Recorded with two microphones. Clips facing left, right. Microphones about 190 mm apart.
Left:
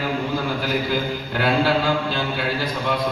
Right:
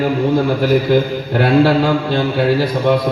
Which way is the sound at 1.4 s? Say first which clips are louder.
Right 8 dB; 60° right (ahead or behind).